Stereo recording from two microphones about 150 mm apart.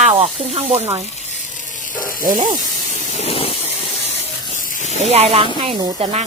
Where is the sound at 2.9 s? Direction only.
45° left (ahead or behind).